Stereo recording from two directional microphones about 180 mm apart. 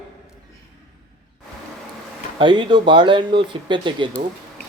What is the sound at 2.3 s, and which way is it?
Speech, 25° right (ahead or behind).